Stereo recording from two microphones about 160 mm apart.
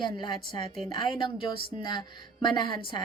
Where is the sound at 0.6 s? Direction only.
40° right (ahead or behind).